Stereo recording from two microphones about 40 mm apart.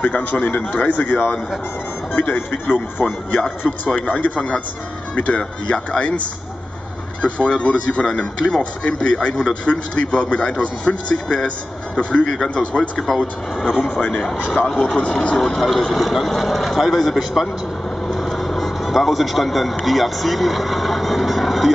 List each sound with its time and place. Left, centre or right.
0.0 s speech: left
2.1 s speech: left
3.4 s speech: centre
3.9 s speech: left
8.1 s speech: centre
8.8 s speech: left
13.0 s speech: centre
14.7 s speech: centre
15.0 s speech: left
15.3 s speech: centre
18.0 s vehicle: centre